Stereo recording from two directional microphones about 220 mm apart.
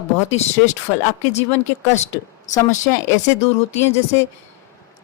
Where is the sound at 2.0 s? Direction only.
35° left (ahead or behind).